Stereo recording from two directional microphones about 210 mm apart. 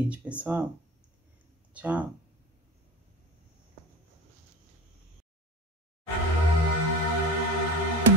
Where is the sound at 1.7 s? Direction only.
5° right (ahead or behind).